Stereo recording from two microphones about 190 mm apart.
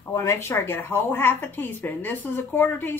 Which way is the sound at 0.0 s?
15° left (ahead or behind).